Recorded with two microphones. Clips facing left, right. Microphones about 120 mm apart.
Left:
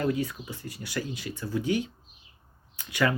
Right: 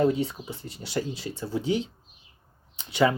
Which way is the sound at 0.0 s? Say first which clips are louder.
Right 4 dB; 25° right (ahead or behind).